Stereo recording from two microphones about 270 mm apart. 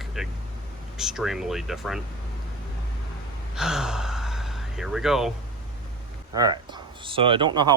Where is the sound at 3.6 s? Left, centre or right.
Centre.